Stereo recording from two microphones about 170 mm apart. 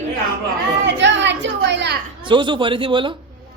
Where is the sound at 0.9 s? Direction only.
90° right.